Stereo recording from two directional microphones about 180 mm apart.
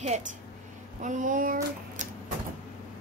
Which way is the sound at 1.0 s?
45° right (ahead or behind).